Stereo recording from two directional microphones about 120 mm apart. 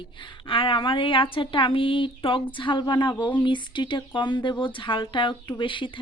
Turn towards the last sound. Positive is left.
turn(degrees=45)  # may be behind; listen again after turning